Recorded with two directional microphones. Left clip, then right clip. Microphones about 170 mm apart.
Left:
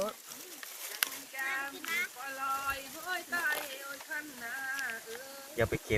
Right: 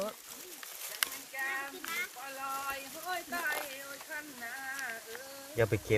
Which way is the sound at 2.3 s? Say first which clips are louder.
Left 3 dB; 5° right (ahead or behind).